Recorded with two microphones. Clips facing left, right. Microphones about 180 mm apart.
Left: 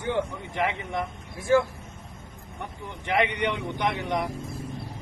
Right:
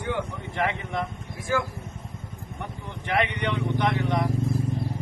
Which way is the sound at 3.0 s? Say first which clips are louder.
Left 1 dB; 15° left (ahead or behind).